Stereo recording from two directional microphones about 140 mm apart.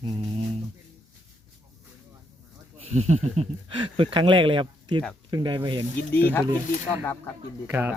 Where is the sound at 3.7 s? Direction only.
35° right (ahead or behind).